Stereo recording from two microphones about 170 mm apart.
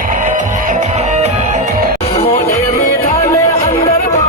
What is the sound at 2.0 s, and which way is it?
Music, 35° left (ahead or behind).